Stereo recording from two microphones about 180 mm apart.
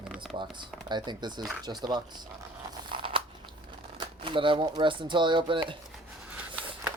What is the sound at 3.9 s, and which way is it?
Speech, 25° right (ahead or behind).